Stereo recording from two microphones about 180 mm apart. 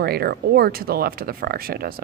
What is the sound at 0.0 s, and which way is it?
Speech, 60° right (ahead or behind).